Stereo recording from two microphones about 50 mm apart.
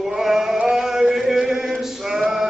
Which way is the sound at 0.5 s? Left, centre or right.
Right.